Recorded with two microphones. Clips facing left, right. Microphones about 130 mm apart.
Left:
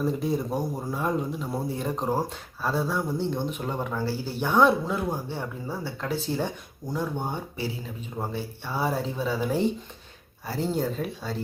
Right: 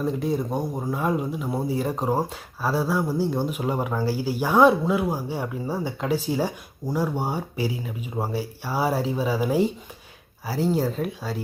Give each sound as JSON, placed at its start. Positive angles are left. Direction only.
{"t": 0.0, "sound": "speech", "side_deg": 0}
{"t": 6.8, "sound": "speech", "side_deg": -35}
{"t": 7.2, "sound": "speech", "side_deg": -5}